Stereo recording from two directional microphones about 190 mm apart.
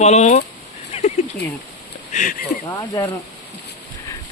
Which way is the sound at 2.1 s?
40° left (ahead or behind).